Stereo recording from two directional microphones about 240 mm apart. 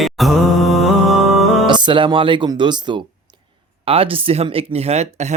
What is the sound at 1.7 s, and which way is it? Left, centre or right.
Speech, centre.